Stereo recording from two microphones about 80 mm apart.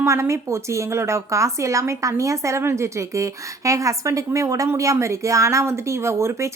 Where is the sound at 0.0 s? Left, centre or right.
Right.